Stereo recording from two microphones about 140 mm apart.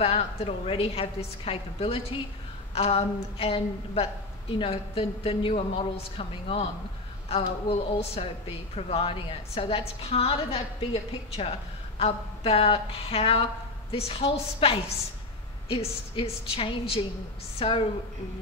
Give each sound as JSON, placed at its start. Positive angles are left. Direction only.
{"t": 0.0, "sound": "a woman's voice", "side_deg": 45}